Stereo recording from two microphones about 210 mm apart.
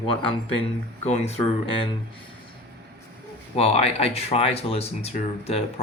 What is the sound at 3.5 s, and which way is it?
Speech, 30° left (ahead or behind).